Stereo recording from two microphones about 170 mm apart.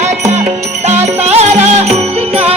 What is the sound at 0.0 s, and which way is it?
Music, 40° right (ahead or behind).